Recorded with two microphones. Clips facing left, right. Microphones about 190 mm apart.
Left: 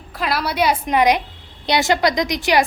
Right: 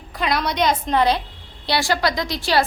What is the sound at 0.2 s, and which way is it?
A woman's voice, 5° left (ahead or behind).